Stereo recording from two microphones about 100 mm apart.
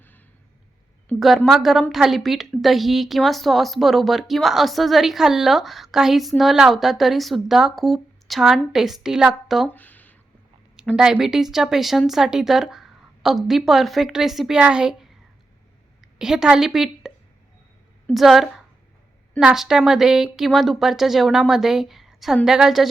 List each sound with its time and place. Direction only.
1.5 s a woman's voice: centre (ahead or behind)
9.6 s a sound: 15° left (ahead or behind)
10.9 s a woman's voice: 5° right (ahead or behind)
16.1 s a woman's voice: 5° right (ahead or behind)
18.1 s a woman's voice: centre (ahead or behind)